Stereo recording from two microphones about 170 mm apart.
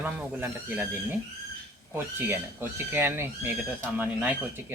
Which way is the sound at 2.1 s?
15° right (ahead or behind).